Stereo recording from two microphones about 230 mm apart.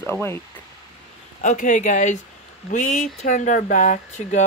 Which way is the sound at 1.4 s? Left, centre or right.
Left.